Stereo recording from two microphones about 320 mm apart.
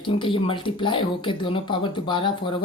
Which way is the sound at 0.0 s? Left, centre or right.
Centre.